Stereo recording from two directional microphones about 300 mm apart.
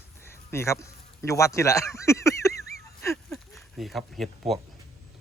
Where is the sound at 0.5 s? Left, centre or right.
Centre.